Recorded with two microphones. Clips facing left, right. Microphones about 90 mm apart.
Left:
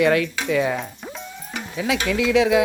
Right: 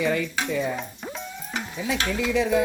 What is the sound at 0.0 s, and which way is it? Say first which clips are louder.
Speech: left 6 dB; 70° left (ahead or behind).